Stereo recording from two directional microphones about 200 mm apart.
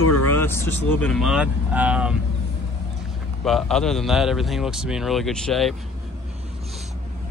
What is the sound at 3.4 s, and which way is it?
A man's voice, centre (ahead or behind).